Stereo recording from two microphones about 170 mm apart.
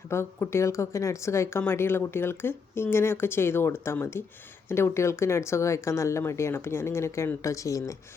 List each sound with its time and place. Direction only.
0.1 s speech: 15° left (ahead or behind)